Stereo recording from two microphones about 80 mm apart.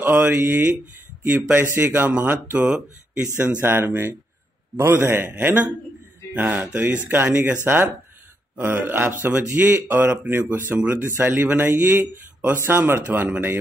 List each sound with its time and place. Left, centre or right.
0.0 s speech: right
3.6 s speech: right
10.8 s speech: centre